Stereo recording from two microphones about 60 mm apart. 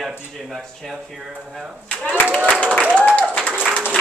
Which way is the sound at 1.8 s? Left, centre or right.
Left.